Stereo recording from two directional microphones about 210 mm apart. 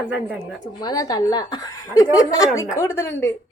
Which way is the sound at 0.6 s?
20° left (ahead or behind).